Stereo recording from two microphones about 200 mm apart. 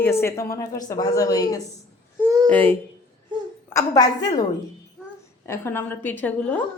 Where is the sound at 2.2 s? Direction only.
15° right (ahead or behind).